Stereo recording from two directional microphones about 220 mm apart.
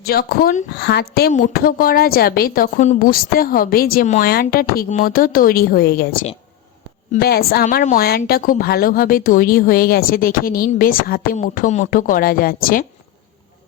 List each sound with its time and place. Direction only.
0.0 s a woman's voice: 45° left (ahead or behind)